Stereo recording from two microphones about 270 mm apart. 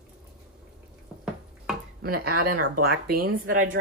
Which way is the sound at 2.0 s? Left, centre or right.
Right.